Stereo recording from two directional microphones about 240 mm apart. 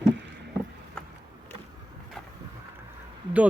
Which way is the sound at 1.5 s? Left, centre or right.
Centre.